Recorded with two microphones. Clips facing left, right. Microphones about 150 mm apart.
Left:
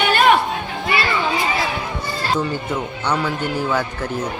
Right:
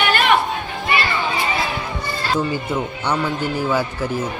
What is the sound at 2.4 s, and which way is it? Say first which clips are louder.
A man's voice: right 1 dB; 5° right (ahead or behind).